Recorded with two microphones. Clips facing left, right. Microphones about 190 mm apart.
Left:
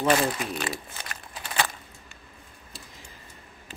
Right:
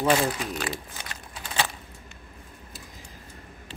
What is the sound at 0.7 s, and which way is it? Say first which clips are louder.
Crumpling: even; 20° right (ahead or behind).